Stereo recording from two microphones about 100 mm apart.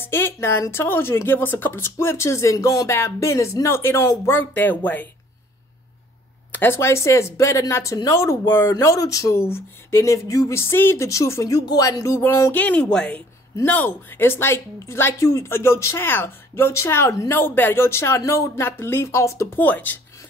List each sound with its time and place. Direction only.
0.0 s speech: 25° left (ahead or behind)
4.4 s speech: 20° left (ahead or behind)
6.5 s speech: 20° left (ahead or behind)
12.2 s speech: 25° left (ahead or behind)